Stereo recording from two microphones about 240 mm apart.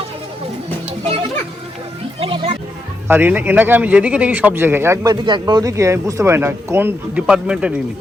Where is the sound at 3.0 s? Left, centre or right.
Centre.